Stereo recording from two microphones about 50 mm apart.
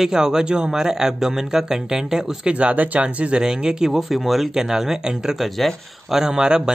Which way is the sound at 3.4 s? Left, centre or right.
Centre.